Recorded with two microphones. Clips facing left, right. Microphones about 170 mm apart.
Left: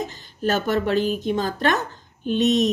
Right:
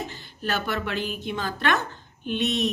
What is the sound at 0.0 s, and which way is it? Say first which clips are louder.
A woman's voice: left 7 dB; 40° left (ahead or behind).